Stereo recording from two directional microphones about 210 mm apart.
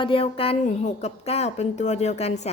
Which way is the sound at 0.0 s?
25° left (ahead or behind).